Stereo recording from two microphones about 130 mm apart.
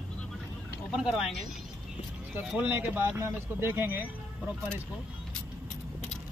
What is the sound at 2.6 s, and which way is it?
Speech, 15° right (ahead or behind).